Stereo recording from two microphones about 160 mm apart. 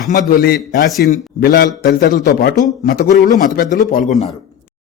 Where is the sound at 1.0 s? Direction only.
55° left (ahead or behind).